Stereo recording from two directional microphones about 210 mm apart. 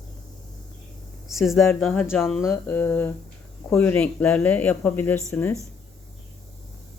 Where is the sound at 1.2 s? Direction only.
Centre (ahead or behind).